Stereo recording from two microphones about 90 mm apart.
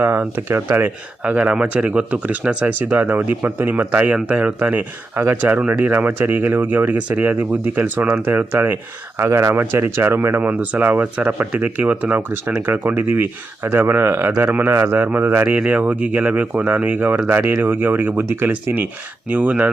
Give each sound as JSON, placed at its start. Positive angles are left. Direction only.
{"t": 0.0, "sound": "speech", "side_deg": -25}
{"t": 1.2, "sound": "speech", "side_deg": -15}